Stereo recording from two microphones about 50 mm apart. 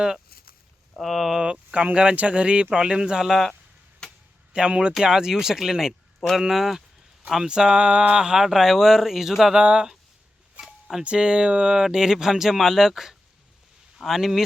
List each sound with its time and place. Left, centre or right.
0.9 s speech: centre
1.4 s speech: centre
3.2 s speech: centre
4.0 s a sound: centre
4.5 s speech: right
4.9 s speech: centre
9.6 s speech: centre
10.6 s a sound: centre
11.0 s speech: centre